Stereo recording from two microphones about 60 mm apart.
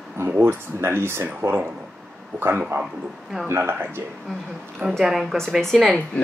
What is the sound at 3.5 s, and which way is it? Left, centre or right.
Speech, right.